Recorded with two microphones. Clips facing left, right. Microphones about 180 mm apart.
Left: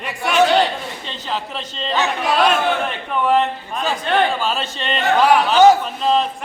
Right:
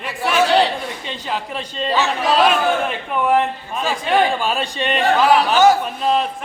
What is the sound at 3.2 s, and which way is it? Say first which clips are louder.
A man's voice: even; 10° right (ahead or behind).